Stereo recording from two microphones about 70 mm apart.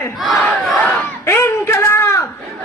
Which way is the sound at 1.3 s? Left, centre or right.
Left.